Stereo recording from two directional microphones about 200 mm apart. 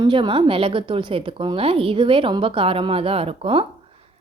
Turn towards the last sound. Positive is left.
turn(degrees=-30)  # may be behind; listen again after turning